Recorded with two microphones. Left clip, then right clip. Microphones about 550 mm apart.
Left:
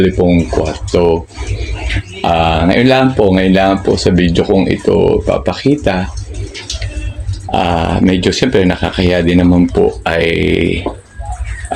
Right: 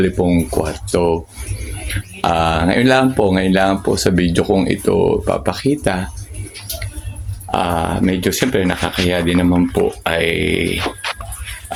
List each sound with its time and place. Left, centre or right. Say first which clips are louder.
0.0 s speech: left 5 dB; right
2.2 s speech: left 4 dB; right
7.5 s speech: left 4 dB; right